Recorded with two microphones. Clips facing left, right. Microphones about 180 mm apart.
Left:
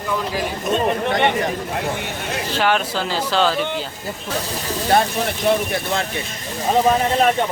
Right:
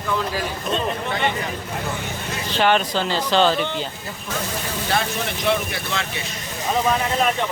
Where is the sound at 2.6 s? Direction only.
5° left (ahead or behind).